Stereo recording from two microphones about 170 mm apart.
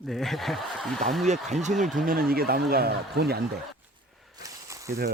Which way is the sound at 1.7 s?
Centre (ahead or behind).